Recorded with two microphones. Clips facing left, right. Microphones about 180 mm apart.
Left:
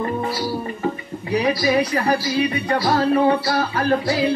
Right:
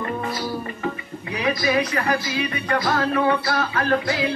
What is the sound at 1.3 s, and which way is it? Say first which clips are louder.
Speech: left 3 dB; 35° left (ahead or behind).